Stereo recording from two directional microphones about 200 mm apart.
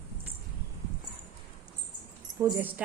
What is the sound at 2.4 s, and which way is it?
Speech, 15° right (ahead or behind).